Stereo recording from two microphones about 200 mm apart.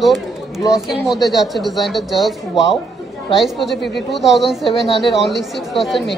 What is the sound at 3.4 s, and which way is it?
Speech, centre (ahead or behind).